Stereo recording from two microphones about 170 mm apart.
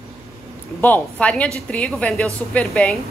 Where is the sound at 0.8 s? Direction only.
10° left (ahead or behind).